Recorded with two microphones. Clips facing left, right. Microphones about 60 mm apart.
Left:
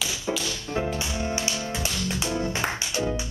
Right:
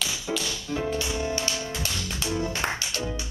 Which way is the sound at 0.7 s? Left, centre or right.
Left.